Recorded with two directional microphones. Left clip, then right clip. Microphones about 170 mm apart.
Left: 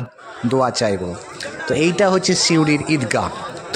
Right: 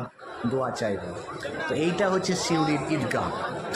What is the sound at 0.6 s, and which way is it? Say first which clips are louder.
A man's voice: left 11 dB; 60° left (ahead or behind).